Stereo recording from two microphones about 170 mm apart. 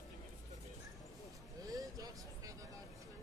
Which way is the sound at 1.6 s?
20° right (ahead or behind).